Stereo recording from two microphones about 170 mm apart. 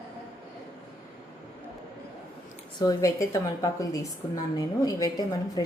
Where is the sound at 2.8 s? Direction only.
20° left (ahead or behind).